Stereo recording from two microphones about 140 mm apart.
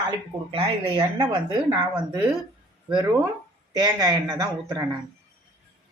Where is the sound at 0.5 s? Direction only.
35° right (ahead or behind).